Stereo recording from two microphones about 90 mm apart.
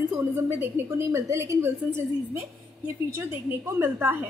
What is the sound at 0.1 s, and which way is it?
A woman's voice, 25° right (ahead or behind).